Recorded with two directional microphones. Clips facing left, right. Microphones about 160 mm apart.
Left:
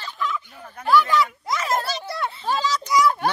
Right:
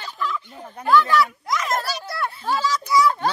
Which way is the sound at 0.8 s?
15° left (ahead or behind).